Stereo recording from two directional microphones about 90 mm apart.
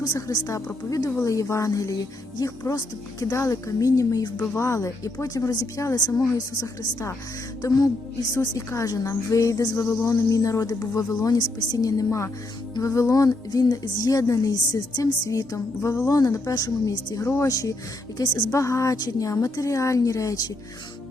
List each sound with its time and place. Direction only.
0.1 s a woman's voice: 40° left (ahead or behind)
8.4 s a woman's voice: 35° left (ahead or behind)
17.2 s speech: 30° left (ahead or behind)
17.5 s a woman's voice: 40° left (ahead or behind)